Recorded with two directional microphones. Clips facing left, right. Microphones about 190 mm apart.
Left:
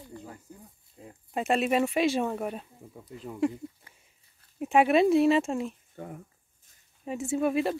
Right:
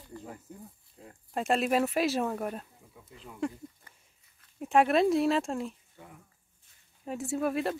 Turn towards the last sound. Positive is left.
turn(degrees=0)  # may be behind; listen again after turning